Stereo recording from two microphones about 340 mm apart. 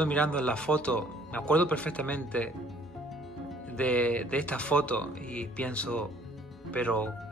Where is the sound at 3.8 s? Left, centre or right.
Centre.